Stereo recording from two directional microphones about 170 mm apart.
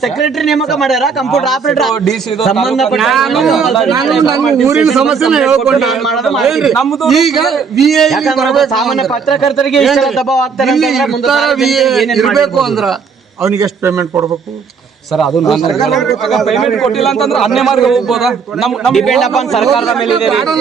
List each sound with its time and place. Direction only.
0.0 s a man's voice: centre (ahead or behind)
13.4 s a man's voice: 15° right (ahead or behind)
15.1 s a man's voice: centre (ahead or behind)